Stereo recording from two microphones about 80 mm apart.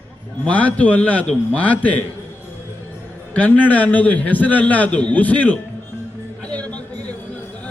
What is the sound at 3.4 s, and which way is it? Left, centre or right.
A man's voice, centre.